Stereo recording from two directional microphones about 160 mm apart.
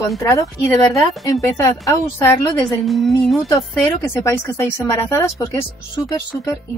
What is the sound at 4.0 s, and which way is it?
A woman's voice, 15° left (ahead or behind).